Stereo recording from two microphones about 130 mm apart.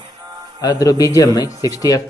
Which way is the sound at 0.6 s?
30° left (ahead or behind).